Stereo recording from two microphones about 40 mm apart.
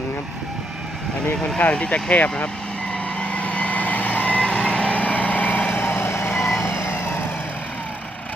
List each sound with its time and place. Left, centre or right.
1.5 s speech: left
3.2 s vehicle: left
4.4 s vehicle: left
5.8 s vehicle: left
6.7 s emergency vehicle: left